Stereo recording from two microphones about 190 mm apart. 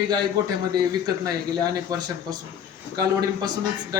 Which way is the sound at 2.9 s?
20° right (ahead or behind).